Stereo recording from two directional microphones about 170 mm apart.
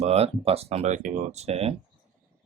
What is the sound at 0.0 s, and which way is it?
Speech, 40° right (ahead or behind).